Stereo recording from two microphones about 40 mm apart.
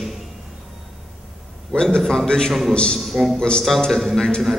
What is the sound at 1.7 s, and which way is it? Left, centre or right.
Speech, left.